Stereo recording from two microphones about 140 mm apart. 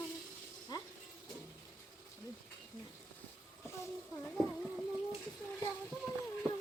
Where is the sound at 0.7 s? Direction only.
30° left (ahead or behind).